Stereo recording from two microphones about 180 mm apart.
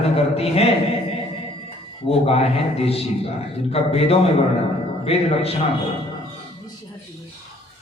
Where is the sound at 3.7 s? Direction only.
35° left (ahead or behind).